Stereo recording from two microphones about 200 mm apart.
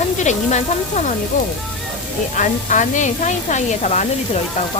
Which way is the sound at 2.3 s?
40° left (ahead or behind).